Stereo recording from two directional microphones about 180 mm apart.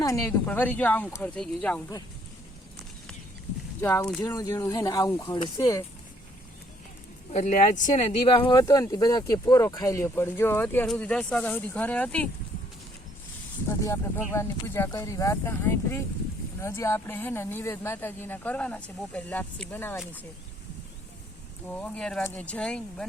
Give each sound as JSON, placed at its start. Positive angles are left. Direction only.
{"t": 0.0, "sound": "speech", "side_deg": 15}
{"t": 3.8, "sound": "speech", "side_deg": 15}
{"t": 7.3, "sound": "speech", "side_deg": 40}
{"t": 13.7, "sound": "speech", "side_deg": 15}
{"t": 21.7, "sound": "speech", "side_deg": 10}